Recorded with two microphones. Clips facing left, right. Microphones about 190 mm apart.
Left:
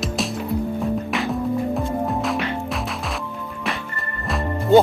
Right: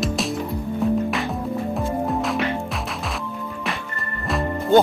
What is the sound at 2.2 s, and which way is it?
Music, centre (ahead or behind).